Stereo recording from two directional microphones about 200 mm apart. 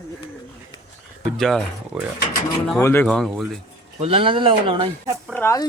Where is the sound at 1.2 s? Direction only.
Centre (ahead or behind).